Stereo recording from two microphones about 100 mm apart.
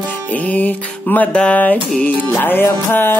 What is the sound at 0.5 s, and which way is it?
Music, 15° left (ahead or behind).